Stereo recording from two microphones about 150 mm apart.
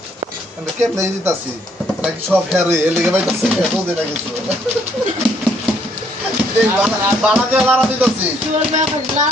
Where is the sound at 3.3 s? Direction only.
5° right (ahead or behind).